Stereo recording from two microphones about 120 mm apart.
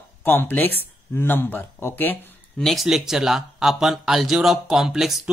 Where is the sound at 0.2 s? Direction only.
15° left (ahead or behind).